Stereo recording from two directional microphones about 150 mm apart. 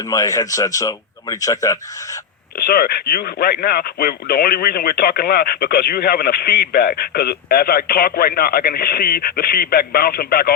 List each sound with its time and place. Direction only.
0.1 s a man's voice: 25° left (ahead or behind)
2.6 s speech: 80° left